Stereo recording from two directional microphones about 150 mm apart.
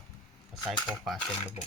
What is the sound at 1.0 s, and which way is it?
Speech, centre (ahead or behind).